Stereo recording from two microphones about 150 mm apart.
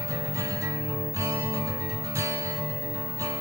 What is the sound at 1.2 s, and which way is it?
Music, 20° right (ahead or behind).